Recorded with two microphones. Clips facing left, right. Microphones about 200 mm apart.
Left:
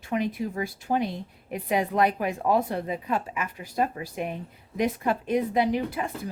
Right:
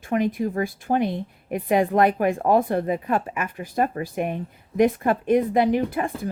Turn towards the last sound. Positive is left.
turn(degrees=-55)  # may be behind; listen again after turning